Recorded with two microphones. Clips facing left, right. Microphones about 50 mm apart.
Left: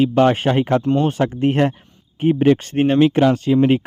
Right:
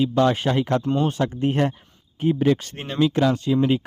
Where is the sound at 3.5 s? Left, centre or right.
Left.